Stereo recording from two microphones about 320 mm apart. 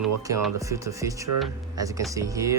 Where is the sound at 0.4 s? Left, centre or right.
Centre.